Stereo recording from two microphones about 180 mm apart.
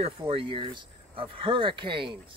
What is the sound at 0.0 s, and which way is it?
Speech, 30° right (ahead or behind).